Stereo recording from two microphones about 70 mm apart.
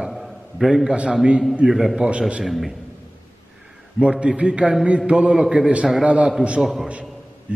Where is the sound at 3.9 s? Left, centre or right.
Centre.